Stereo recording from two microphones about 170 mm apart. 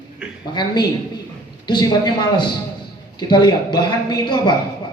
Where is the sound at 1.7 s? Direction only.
25° left (ahead or behind).